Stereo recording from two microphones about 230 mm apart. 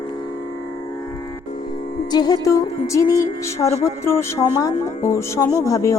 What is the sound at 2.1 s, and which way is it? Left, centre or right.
Music, centre.